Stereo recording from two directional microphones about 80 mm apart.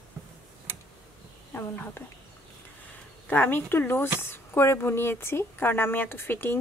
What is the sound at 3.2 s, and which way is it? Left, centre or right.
Speech, left.